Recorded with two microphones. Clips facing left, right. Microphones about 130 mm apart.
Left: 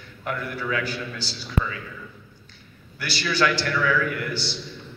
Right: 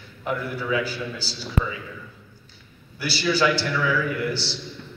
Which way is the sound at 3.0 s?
10° right (ahead or behind).